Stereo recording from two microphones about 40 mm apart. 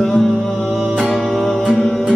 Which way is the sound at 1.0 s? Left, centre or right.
Centre.